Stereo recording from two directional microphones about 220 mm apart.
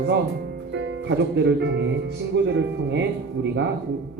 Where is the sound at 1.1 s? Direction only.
55° right (ahead or behind).